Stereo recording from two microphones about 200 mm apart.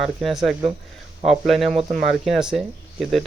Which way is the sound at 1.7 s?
30° right (ahead or behind).